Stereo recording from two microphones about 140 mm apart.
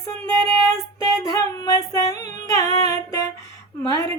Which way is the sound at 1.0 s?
25° left (ahead or behind).